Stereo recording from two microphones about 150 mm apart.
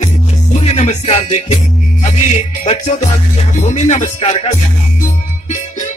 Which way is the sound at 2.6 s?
45° left (ahead or behind).